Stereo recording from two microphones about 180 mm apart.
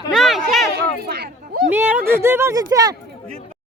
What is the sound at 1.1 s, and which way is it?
Speech, 60° right (ahead or behind).